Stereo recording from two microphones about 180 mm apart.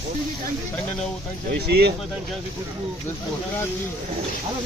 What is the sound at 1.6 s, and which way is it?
Speech, 65° right (ahead or behind).